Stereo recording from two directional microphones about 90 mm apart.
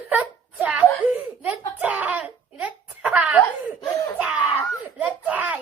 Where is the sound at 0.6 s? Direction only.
15° right (ahead or behind).